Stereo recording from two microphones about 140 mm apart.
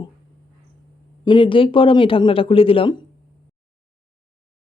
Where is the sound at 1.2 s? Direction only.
35° left (ahead or behind).